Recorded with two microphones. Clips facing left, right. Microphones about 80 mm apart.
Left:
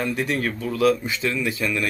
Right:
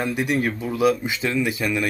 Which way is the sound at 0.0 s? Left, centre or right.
Centre.